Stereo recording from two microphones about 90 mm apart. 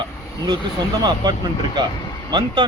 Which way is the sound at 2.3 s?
55° right (ahead or behind).